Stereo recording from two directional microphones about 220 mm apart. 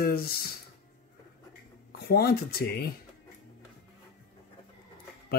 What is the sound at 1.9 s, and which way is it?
Speech, 45° left (ahead or behind).